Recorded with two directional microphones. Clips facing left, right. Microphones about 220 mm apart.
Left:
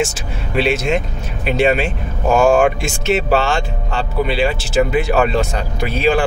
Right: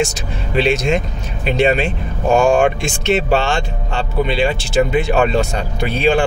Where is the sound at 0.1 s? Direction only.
5° left (ahead or behind).